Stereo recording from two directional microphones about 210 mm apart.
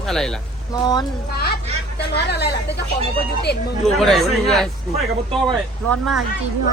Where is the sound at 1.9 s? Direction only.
50° left (ahead or behind).